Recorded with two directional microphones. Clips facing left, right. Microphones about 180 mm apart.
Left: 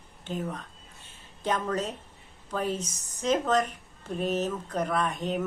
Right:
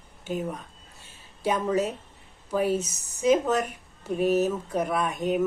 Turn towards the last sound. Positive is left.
turn(degrees=-10)  # may be behind; listen again after turning